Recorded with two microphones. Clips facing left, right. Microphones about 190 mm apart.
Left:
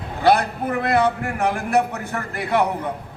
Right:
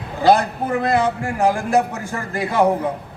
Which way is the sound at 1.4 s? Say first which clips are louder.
Right 3 dB; 60° left (ahead or behind).